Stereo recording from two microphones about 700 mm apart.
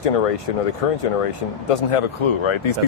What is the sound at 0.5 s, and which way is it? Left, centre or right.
Speech, left.